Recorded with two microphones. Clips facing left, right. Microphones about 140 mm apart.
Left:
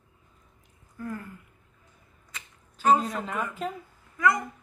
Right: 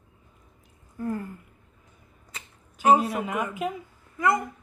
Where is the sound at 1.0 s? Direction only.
30° right (ahead or behind).